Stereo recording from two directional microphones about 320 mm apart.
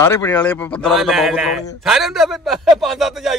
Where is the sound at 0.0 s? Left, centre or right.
Centre.